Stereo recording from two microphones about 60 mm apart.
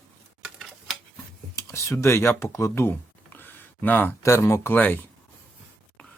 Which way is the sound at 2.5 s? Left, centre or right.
Left.